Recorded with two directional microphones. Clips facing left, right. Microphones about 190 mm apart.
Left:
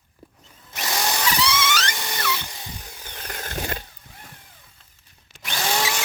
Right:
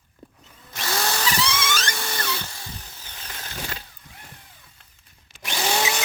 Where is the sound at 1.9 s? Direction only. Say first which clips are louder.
Left 1 dB; 15° left (ahead or behind).